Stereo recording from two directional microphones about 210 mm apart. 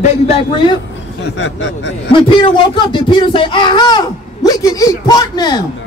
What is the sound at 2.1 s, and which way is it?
Speech, 25° left (ahead or behind).